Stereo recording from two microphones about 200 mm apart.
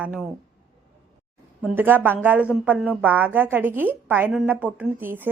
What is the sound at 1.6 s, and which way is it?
A woman's voice, 10° right (ahead or behind).